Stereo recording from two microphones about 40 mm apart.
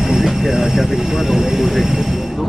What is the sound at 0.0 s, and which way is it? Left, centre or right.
Speech, centre.